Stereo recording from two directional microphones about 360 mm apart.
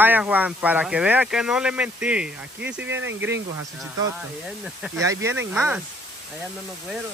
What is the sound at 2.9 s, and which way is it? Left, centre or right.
Speech, right.